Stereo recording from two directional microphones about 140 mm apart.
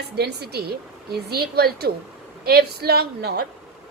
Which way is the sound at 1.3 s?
90° right.